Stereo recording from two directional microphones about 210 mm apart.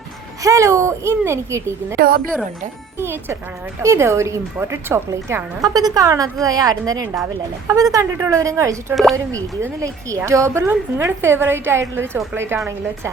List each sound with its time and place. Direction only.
0.4 s a woman's voice: 15° right (ahead or behind)
2.0 s a woman's voice: 45° right (ahead or behind)
3.0 s a woman's voice: 10° right (ahead or behind)